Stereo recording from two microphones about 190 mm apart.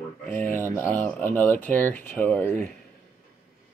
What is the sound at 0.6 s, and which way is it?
Speech, 15° left (ahead or behind).